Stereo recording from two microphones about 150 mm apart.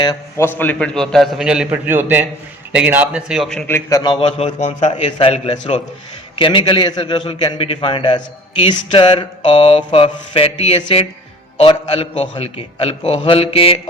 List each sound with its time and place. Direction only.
0.0 s a man's voice: 25° left (ahead or behind)
0.4 s a man's voice: 15° left (ahead or behind)
3.7 s a man's voice: 20° left (ahead or behind)
4.1 s a man's voice: 40° left (ahead or behind)
6.4 s a man's voice: 35° left (ahead or behind)